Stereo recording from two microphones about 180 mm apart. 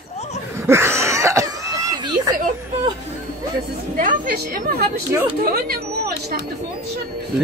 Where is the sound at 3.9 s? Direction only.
55° right (ahead or behind).